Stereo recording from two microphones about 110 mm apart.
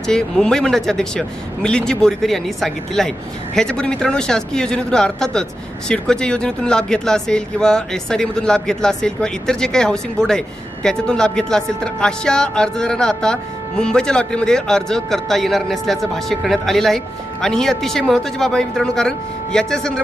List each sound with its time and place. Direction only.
0.0 s speech: 5° left (ahead or behind)